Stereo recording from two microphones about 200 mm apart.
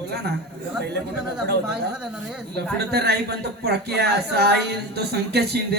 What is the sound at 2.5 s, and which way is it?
Speech, 55° right (ahead or behind).